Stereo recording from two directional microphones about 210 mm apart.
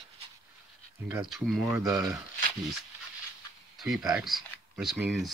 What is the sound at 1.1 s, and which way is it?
Speech, centre (ahead or behind).